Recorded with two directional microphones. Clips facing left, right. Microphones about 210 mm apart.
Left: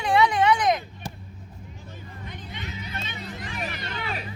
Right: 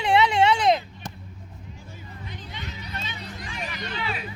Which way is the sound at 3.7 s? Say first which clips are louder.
Right 1 dB; 45° left (ahead or behind).